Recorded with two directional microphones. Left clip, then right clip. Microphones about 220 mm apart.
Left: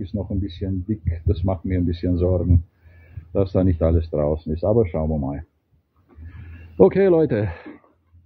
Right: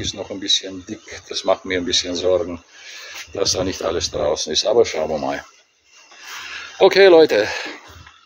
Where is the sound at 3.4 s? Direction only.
5° right (ahead or behind).